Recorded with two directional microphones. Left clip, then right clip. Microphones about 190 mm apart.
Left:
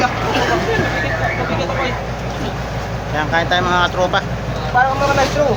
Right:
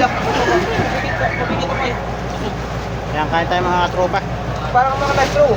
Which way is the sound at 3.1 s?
10° left (ahead or behind).